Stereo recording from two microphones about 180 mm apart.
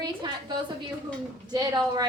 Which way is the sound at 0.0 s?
25° right (ahead or behind).